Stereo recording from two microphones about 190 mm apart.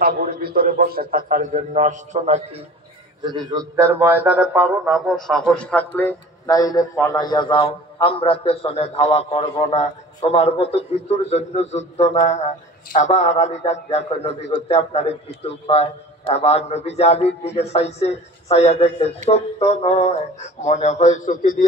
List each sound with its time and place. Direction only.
0.0 s a man's voice: 55° right (ahead or behind); by 2.6 s 35° right (ahead or behind)
3.2 s a man's voice: 25° right (ahead or behind); by 21.6 s 45° left (ahead or behind)